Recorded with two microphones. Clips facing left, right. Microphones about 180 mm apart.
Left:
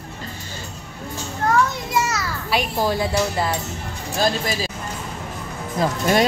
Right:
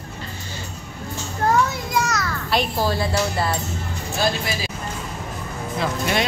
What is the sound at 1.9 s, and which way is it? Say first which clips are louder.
Children playing: even; 5° left (ahead or behind).